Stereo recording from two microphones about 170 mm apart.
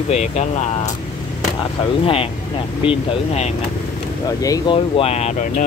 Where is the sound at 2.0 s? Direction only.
35° left (ahead or behind).